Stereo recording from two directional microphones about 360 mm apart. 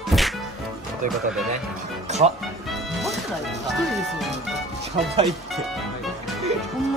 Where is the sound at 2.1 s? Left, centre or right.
Centre.